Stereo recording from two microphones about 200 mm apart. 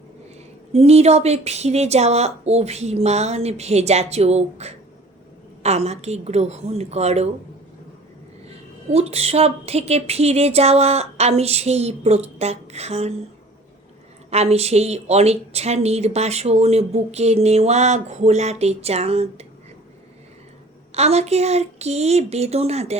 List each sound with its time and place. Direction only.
0.7 s speech: 30° right (ahead or behind)
8.4 s speech: 30° right (ahead or behind)
14.3 s speech: 30° right (ahead or behind)
20.9 s speech: 30° right (ahead or behind)